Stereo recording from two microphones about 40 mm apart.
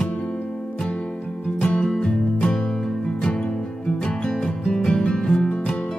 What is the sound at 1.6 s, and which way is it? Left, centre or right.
Music, left.